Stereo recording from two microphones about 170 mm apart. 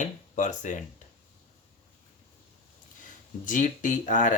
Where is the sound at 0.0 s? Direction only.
45° left (ahead or behind).